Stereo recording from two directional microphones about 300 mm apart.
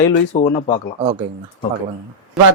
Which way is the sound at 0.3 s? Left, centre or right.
Centre.